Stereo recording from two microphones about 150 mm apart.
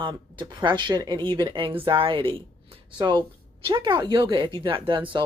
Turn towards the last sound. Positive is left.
turn(degrees=-35)  # may be behind; listen again after turning